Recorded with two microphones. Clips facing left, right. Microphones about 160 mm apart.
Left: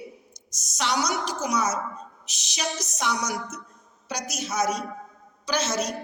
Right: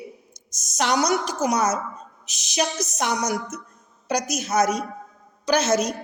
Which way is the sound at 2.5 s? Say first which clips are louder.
Right 6 dB; 50° right (ahead or behind).